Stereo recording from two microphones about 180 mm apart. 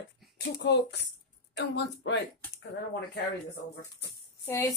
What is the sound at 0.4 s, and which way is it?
Speech, 75° left (ahead or behind).